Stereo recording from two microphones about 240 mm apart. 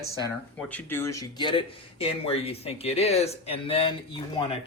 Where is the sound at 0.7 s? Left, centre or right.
Centre.